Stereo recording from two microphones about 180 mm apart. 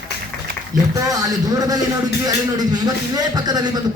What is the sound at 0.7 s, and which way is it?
A man's voice, 20° right (ahead or behind).